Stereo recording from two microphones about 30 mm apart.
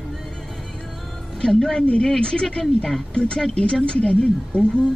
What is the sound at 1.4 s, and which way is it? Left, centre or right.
A woman's voice, left.